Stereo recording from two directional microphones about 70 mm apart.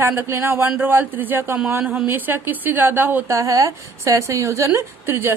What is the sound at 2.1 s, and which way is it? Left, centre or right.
A woman's voice, right.